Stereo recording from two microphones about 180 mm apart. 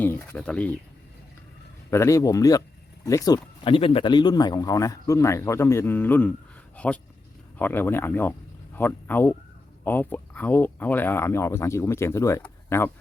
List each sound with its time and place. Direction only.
0.0 s speech: 15° left (ahead or behind)
1.9 s speech: 15° left (ahead or behind)